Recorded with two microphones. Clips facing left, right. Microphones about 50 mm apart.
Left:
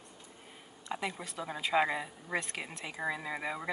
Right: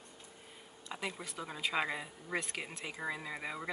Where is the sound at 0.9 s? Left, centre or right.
Centre.